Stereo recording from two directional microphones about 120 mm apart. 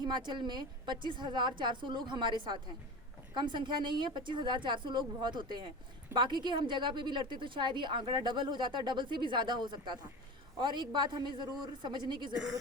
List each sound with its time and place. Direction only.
0.0 s a woman's voice: 40° right (ahead or behind)
12.3 s a woman's voice: 5° right (ahead or behind)